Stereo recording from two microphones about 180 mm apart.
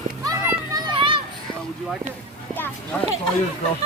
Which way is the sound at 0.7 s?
25° right (ahead or behind).